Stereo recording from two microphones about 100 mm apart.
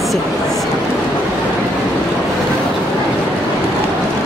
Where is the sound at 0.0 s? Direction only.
Centre (ahead or behind).